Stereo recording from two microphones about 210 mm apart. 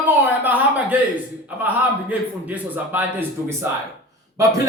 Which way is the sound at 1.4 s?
5° right (ahead or behind).